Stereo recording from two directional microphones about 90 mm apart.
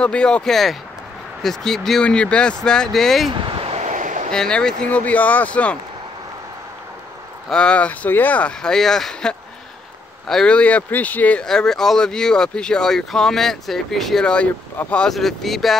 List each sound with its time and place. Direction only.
0.0 s speech: 10° left (ahead or behind)
3.3 s speech: 65° right (ahead or behind)
4.3 s speech: 10° left (ahead or behind)
7.4 s speech: 10° left (ahead or behind)
11.4 s speech: 5° left (ahead or behind)
15.0 s speech: centre (ahead or behind)